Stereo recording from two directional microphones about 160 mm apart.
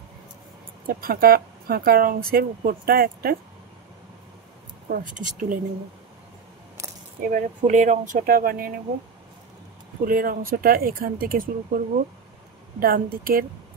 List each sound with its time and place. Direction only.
0.8 s speech: 65° right (ahead or behind)
4.8 s speech: 60° right (ahead or behind)
7.2 s speech: 60° right (ahead or behind)
10.0 s speech: 65° right (ahead or behind)
12.8 s speech: 65° right (ahead or behind)